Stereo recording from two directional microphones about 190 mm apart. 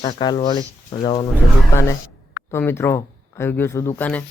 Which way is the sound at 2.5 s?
10° left (ahead or behind).